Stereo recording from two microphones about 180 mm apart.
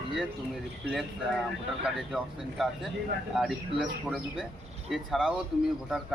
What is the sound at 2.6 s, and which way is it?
Speech, centre (ahead or behind).